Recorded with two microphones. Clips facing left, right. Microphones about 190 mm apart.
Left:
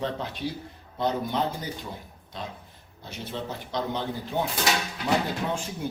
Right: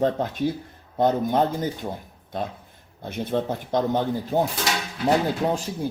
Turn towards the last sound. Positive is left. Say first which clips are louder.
# right 6 dB
turn(degrees=-40)  # may be behind; listen again after turning